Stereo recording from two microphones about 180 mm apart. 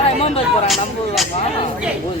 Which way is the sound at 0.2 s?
35° left (ahead or behind).